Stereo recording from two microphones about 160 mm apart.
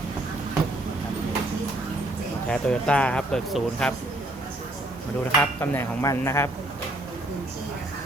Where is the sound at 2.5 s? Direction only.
5° left (ahead or behind).